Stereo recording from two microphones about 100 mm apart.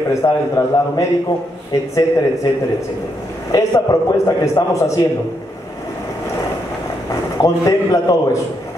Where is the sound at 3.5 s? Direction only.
35° left (ahead or behind).